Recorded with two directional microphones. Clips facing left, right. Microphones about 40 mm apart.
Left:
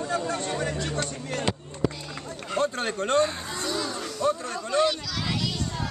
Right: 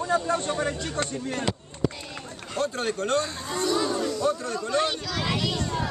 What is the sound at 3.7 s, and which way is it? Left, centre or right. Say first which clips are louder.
Speech: right 6 dB; centre.